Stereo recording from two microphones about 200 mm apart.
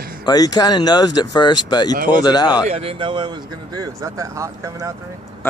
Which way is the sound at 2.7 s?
30° right (ahead or behind).